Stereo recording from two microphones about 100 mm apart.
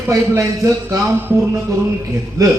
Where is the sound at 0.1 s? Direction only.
30° right (ahead or behind).